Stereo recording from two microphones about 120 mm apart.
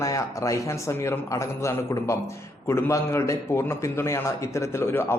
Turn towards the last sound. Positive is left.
turn(degrees=20)  # may be behind; listen again after turning